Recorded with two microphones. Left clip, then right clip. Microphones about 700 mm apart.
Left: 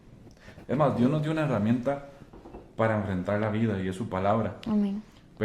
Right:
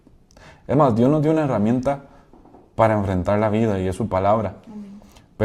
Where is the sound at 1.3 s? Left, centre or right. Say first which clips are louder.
Right 9 dB; right.